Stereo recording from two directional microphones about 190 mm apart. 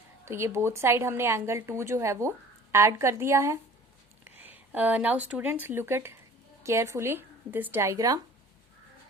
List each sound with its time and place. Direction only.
0.3 s a woman's voice: 15° right (ahead or behind)